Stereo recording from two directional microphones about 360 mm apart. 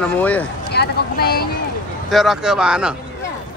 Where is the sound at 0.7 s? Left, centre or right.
Left.